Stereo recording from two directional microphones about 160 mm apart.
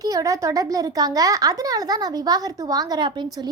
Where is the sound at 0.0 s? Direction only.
20° right (ahead or behind).